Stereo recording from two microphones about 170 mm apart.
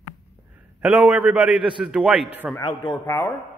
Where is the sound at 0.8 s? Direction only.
10° right (ahead or behind).